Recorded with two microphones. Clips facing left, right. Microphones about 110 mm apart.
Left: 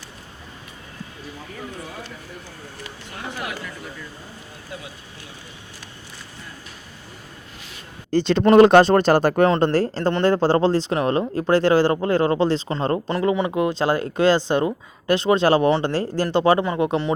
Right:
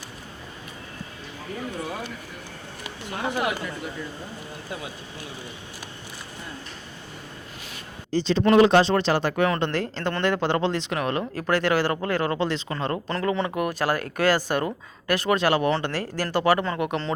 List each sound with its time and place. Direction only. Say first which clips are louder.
3.2 s speech: right 5 dB; 15° right (ahead or behind)
8.1 s speech: left 5 dB; 60° left (ahead or behind); by 13.0 s 30° left (ahead or behind)
13.1 s speech: left 4 dB; 15° left (ahead or behind)